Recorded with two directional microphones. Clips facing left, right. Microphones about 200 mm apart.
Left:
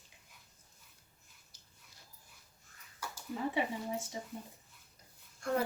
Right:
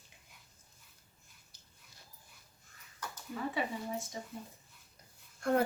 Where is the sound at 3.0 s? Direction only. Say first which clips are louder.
Even; 10° left (ahead or behind).